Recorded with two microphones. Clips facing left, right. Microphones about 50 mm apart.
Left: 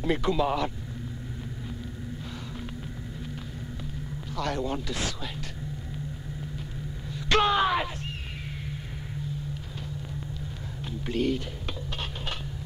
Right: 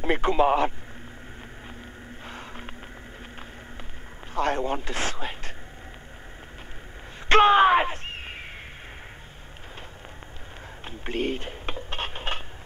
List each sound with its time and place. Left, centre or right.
0.0 s speech: right
4.4 s speech: right
7.2 s speech: right
10.9 s speech: right